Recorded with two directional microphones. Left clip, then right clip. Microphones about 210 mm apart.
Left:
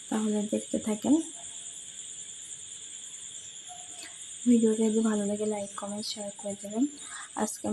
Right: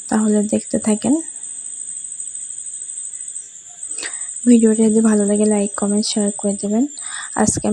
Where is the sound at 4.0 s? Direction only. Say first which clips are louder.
Right 14 dB; 40° right (ahead or behind).